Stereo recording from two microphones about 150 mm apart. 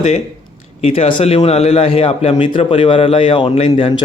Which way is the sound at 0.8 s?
40° left (ahead or behind).